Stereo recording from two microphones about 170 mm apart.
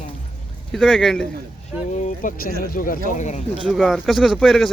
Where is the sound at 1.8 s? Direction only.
45° left (ahead or behind).